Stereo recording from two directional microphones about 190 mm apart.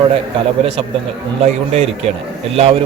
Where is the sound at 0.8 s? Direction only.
30° right (ahead or behind).